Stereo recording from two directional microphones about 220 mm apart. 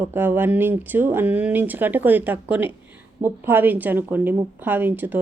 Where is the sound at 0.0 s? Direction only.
10° right (ahead or behind).